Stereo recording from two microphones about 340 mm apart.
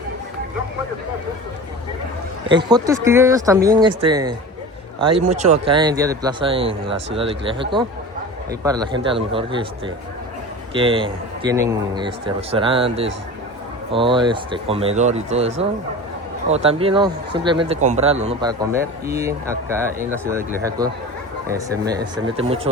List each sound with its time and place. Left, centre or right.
2.5 s speech: centre
16.5 s speech: centre